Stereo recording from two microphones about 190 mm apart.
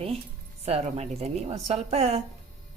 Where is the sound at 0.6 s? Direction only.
30° right (ahead or behind).